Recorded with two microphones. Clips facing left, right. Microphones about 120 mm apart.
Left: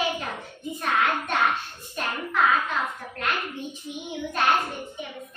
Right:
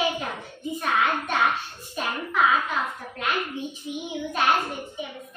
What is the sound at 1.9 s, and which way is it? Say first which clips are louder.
Hands: right 1 dB; 5° right (ahead or behind).